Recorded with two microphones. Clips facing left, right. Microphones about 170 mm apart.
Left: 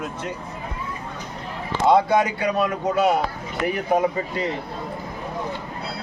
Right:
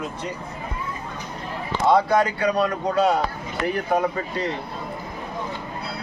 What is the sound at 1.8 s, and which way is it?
Speech, 20° left (ahead or behind).